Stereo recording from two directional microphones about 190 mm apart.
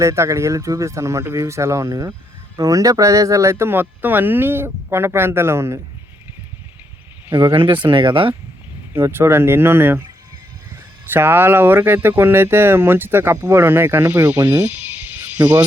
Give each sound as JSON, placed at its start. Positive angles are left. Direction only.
{"t": 0.0, "sound": "speech", "side_deg": -15}
{"t": 7.3, "sound": "speech", "side_deg": -25}
{"t": 8.9, "sound": "speech", "side_deg": -15}
{"t": 11.1, "sound": "speech", "side_deg": -10}